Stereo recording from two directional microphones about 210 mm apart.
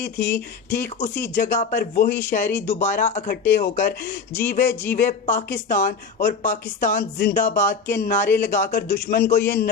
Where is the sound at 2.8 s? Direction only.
35° left (ahead or behind).